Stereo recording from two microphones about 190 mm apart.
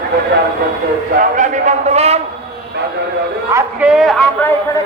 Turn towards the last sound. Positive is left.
turn(degrees=5)  # may be behind; listen again after turning